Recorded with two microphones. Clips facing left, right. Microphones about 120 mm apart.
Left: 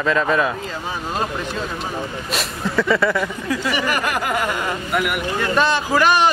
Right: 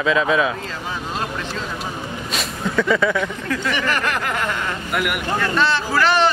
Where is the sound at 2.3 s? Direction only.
Centre (ahead or behind).